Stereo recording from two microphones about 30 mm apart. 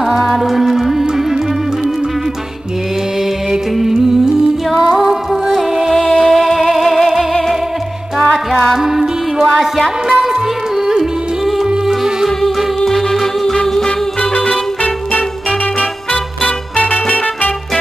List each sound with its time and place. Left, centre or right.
0.0 s music: centre
4.6 s music: centre
5.9 s music: centre
8.3 s music: left
8.7 s music: centre
11.5 s music: centre
12.4 s music: centre
13.6 s music: left
14.3 s music: left